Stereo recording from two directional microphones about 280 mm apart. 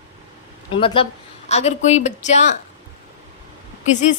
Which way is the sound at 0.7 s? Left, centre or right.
Centre.